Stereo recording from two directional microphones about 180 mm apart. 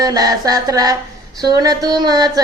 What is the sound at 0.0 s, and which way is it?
Speech, 20° right (ahead or behind).